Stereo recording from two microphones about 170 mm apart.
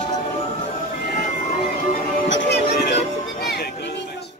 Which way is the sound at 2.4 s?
90° left.